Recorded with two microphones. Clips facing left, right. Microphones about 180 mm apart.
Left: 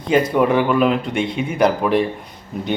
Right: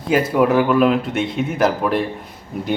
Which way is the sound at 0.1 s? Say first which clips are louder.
Even; 5° right (ahead or behind).